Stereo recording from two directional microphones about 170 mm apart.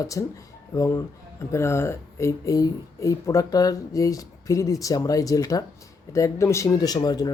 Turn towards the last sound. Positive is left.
turn(degrees=25)  # may be behind; listen again after turning